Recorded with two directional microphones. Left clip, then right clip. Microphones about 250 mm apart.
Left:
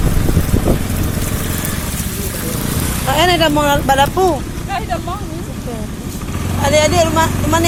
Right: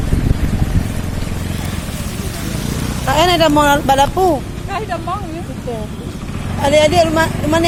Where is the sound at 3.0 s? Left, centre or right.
Centre.